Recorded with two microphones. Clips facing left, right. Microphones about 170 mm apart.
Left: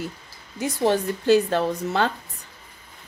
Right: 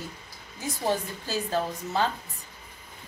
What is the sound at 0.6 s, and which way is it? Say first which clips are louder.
Speech: left 7 dB; 70° left (ahead or behind).